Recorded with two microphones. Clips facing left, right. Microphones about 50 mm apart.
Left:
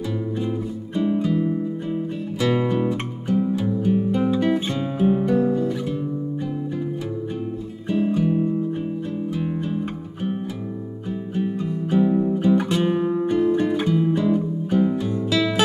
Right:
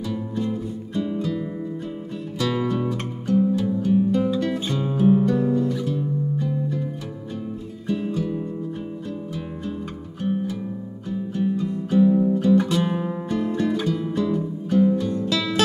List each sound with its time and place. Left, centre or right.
0.4 s music: centre
5.4 s guitar: left
8.1 s music: left
11.3 s music: left
15.2 s music: centre